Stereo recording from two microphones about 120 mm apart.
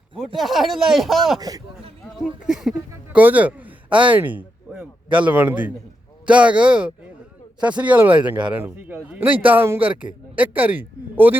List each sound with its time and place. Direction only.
0.3 s speech: centre (ahead or behind)
1.4 s a man's voice: 30° right (ahead or behind)
2.1 s a man's voice: centre (ahead or behind)